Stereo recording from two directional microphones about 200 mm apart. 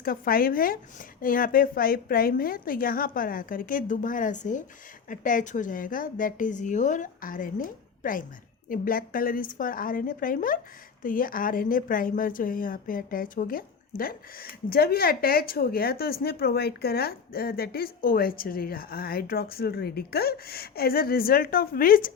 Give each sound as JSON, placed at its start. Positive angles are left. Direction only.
{"t": 0.0, "sound": "a woman's voice", "side_deg": 45}